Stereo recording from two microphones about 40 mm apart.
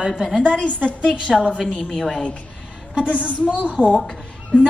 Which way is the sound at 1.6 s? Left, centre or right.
Centre.